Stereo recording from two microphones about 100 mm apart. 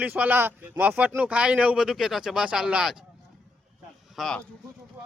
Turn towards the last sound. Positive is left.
turn(degrees=5)  # may be behind; listen again after turning